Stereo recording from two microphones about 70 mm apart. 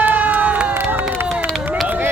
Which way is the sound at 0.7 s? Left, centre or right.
Right.